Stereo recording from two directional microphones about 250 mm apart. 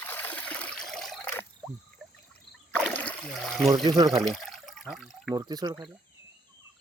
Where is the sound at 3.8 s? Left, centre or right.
Centre.